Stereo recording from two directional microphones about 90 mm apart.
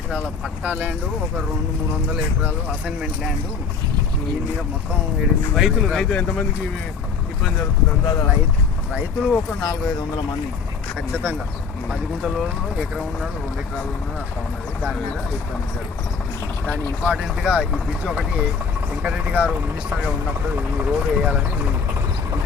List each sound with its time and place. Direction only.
0.6 s speech: 15° right (ahead or behind)
5.2 s speech: 5° right (ahead or behind); by 6.5 s 15° left (ahead or behind)
8.9 s speech: 15° right (ahead or behind)
11.9 s speech: centre (ahead or behind)
16.6 s speech: 20° left (ahead or behind)
17.1 s speech: 10° right (ahead or behind)
20.6 s speech: 15° right (ahead or behind)